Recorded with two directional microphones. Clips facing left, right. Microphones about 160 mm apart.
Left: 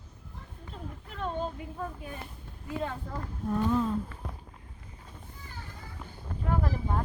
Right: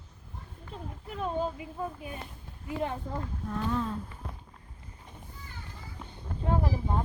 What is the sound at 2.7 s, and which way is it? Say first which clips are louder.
Speech: right 2 dB; 20° right (ahead or behind).